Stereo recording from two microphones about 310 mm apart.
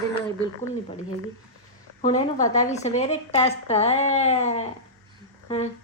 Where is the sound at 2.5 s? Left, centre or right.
Left.